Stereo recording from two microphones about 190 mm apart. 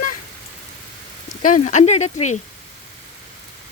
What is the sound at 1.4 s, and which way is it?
Speech, 40° left (ahead or behind).